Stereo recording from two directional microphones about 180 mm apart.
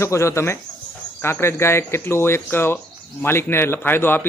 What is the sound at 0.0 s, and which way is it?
Speech, 15° left (ahead or behind).